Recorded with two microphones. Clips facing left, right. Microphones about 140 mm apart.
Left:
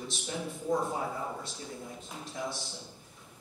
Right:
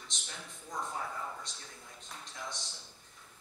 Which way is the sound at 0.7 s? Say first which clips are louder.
Left 9 dB; 30° left (ahead or behind).